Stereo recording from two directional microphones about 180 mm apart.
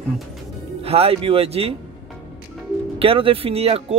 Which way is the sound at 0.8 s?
35° right (ahead or behind).